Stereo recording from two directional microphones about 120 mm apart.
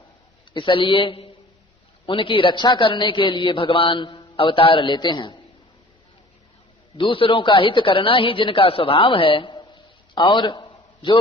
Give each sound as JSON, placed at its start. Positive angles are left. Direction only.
{"t": 0.5, "sound": "a man's voice", "side_deg": 45}
{"t": 6.9, "sound": "a man's voice", "side_deg": 45}